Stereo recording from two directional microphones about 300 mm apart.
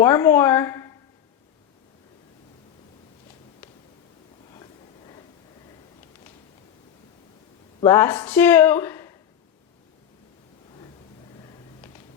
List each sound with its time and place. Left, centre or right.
0.0 s a woman's voice: centre
4.5 s a sound: centre
7.8 s speech: centre